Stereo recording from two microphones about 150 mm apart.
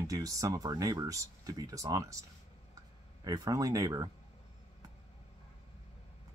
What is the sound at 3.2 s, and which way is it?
Speech, 25° right (ahead or behind).